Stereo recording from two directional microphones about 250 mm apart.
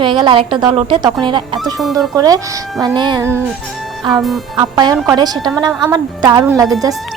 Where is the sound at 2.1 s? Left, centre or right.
Centre.